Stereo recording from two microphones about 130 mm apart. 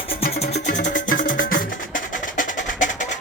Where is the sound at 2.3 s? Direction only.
75° left (ahead or behind).